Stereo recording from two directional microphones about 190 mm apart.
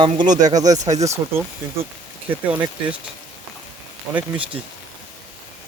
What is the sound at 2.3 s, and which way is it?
Speech, 10° right (ahead or behind).